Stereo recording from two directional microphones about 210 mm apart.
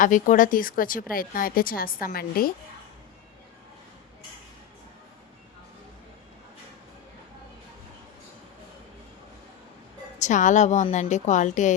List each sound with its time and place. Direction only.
0.0 s speech: 40° left (ahead or behind)
10.2 s a woman's voice: 35° left (ahead or behind)